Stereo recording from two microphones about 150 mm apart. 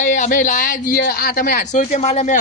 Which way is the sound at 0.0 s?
55° left (ahead or behind).